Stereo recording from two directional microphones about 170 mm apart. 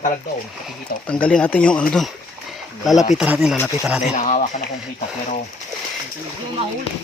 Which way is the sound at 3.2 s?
5° right (ahead or behind).